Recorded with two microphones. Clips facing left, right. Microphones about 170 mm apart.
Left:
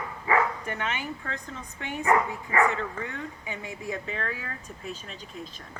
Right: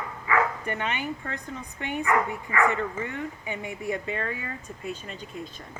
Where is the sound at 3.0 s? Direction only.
20° right (ahead or behind).